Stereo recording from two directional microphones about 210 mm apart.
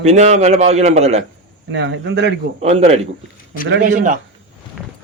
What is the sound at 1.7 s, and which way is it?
Speech, 55° right (ahead or behind).